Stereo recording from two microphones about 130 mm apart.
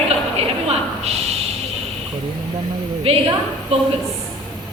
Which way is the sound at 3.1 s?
50° right (ahead or behind).